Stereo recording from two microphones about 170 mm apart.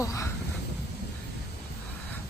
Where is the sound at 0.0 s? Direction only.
20° left (ahead or behind).